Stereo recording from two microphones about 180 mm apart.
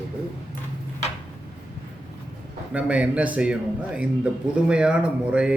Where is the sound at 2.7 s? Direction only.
5° right (ahead or behind).